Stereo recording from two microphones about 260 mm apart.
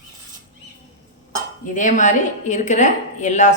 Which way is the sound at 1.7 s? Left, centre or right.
Left.